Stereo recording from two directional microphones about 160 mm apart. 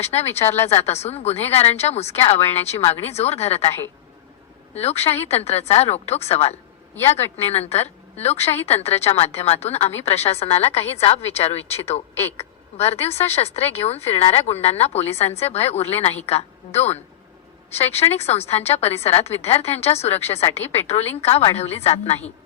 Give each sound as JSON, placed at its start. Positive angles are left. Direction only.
{"t": 0.0, "sound": "speech", "side_deg": 40}
{"t": 4.7, "sound": "speech", "side_deg": 40}
{"t": 6.9, "sound": "speech", "side_deg": 15}
{"t": 7.3, "sound": "speech", "side_deg": 40}
{"t": 12.1, "sound": "speech", "side_deg": 15}
{"t": 12.7, "sound": "speech", "side_deg": 40}
{"t": 17.7, "sound": "speech", "side_deg": 40}